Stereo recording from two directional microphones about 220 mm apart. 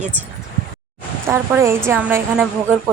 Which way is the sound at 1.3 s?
10° right (ahead or behind).